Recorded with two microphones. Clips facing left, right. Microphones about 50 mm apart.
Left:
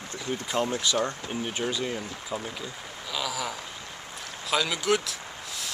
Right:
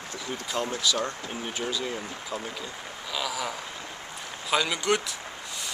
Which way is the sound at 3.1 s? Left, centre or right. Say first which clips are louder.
Even; centre.